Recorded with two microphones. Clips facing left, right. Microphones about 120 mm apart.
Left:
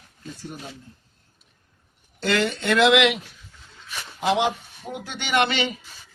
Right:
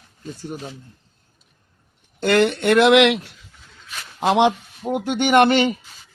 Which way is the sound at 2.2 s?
55° right (ahead or behind).